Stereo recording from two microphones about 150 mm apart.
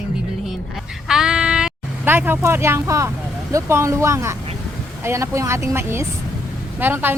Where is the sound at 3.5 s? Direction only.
20° right (ahead or behind).